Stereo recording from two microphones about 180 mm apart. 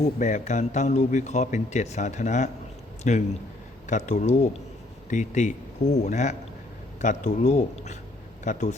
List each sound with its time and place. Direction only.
0.0 s a man's voice: 40° left (ahead or behind)